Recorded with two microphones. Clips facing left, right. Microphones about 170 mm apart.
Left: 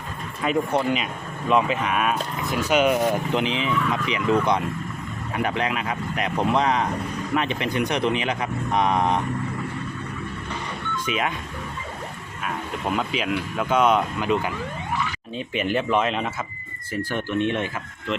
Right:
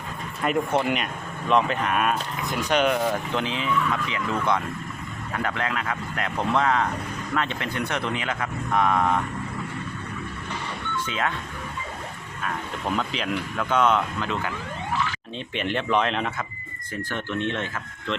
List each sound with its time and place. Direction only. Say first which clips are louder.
0.4 s speech: left 1 dB; centre (ahead or behind)
3.3 s speech: left 2 dB; 20° left (ahead or behind)
10.9 s speech: left 2 dB; 15° left (ahead or behind)
13.0 s speech: left 2 dB; 5° left (ahead or behind)